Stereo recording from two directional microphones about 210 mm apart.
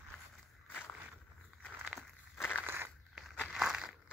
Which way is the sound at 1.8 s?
5° right (ahead or behind).